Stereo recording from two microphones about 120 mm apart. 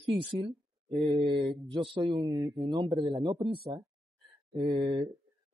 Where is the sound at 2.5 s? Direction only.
40° right (ahead or behind).